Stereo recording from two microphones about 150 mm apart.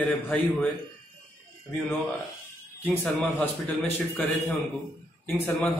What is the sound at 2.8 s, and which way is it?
A man's voice, 10° left (ahead or behind).